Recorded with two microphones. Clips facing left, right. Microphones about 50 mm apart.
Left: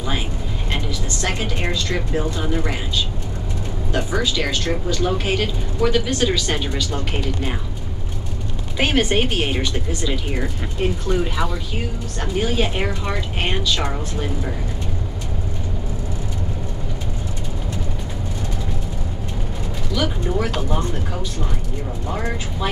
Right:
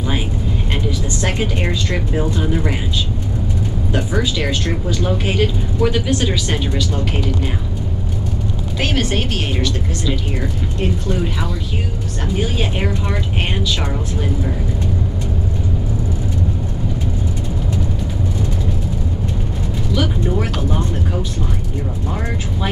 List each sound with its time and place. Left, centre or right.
0.8 s speech: centre
3.9 s speech: centre
8.7 s speech: centre
19.9 s music: centre